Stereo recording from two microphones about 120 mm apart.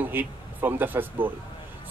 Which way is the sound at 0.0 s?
15° right (ahead or behind).